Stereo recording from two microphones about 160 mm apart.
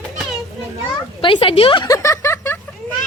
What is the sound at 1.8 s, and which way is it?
Speech, 20° left (ahead or behind).